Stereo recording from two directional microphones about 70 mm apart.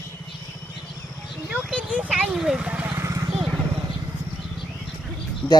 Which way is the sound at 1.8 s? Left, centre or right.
Centre.